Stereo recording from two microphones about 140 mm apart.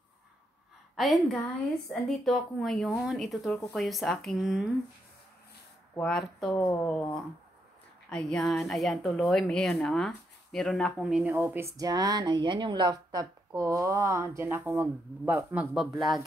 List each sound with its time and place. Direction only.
0.9 s speech: centre (ahead or behind)
5.9 s speech: 5° left (ahead or behind)
8.1 s speech: 5° left (ahead or behind)
11.3 s a woman's voice: 15° right (ahead or behind); by 16.3 s centre (ahead or behind)